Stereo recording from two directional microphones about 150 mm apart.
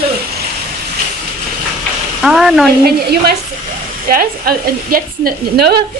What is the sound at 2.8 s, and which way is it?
A woman's voice, 85° right.